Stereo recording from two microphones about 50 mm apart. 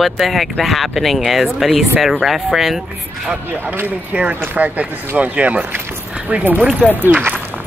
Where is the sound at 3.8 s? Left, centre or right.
Right.